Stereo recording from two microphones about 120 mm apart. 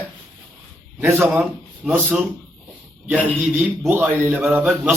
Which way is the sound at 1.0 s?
20° right (ahead or behind).